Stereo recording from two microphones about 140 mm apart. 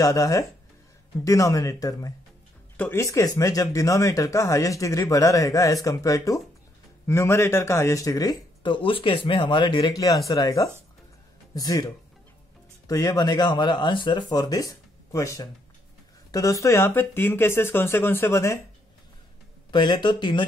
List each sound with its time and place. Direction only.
0.0 s speech: 25° left (ahead or behind)
12.8 s speech: 25° left (ahead or behind)
19.7 s speech: 30° left (ahead or behind)